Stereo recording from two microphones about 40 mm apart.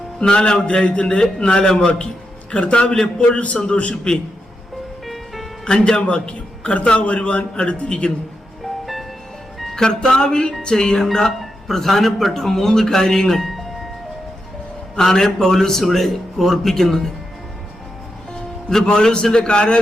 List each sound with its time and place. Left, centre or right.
0.2 s a man's voice: left
2.5 s a man's voice: left
3.2 s a man's voice: left
5.0 s music: centre
5.6 s a man's voice: centre
6.0 s a man's voice: left
8.6 s music: centre
9.7 s a man's voice: centre
14.9 s a man's voice: centre
18.9 s a man's voice: left